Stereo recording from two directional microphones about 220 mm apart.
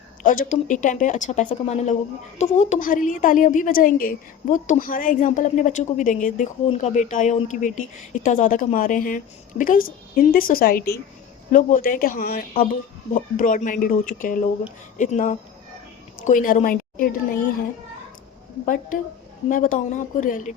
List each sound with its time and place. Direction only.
0.2 s a woman's voice: 35° left (ahead or behind)
18.6 s a woman's voice: 35° left (ahead or behind)